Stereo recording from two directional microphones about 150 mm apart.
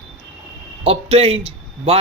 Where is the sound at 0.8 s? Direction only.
40° right (ahead or behind).